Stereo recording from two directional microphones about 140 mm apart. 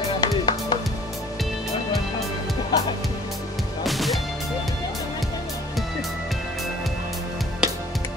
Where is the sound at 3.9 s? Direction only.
Centre (ahead or behind).